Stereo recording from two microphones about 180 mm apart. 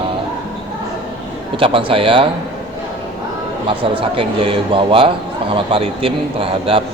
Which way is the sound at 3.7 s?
30° right (ahead or behind).